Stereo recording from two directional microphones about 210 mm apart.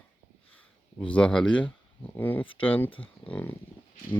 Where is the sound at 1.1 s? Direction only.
5° left (ahead or behind).